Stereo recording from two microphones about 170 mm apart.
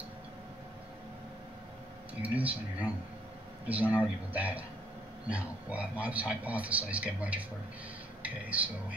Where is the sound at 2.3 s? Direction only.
10° right (ahead or behind).